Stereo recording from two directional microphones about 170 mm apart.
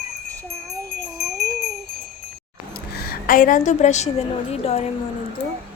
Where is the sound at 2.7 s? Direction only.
65° left (ahead or behind); by 4.1 s 40° left (ahead or behind).